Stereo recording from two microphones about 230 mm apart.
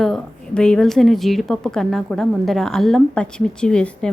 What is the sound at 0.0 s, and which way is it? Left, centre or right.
A woman's voice, centre.